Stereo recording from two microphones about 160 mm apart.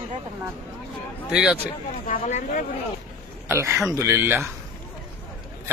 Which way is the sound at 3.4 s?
15° right (ahead or behind).